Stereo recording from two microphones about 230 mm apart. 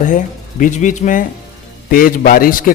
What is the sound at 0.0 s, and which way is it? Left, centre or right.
Speech, left.